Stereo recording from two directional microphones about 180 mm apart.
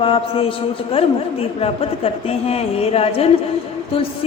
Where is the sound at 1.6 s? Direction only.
35° left (ahead or behind).